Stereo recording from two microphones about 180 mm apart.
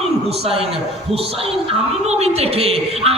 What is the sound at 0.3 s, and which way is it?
A man's voice, 30° right (ahead or behind).